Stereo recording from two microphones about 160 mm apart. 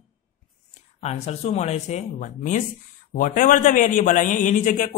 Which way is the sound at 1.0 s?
40° left (ahead or behind).